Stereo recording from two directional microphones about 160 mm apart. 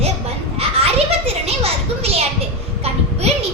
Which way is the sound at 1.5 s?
40° right (ahead or behind).